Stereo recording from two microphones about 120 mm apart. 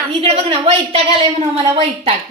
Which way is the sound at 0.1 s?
50° right (ahead or behind).